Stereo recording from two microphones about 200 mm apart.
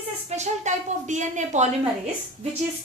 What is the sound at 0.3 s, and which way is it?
A woman's voice, 35° right (ahead or behind).